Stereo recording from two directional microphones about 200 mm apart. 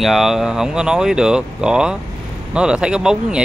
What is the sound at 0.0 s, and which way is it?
Speech, centre (ahead or behind).